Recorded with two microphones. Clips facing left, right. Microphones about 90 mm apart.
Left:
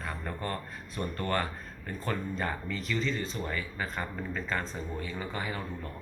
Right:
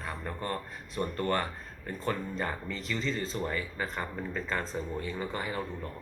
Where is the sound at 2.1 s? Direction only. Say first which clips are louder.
Even; 25° right (ahead or behind).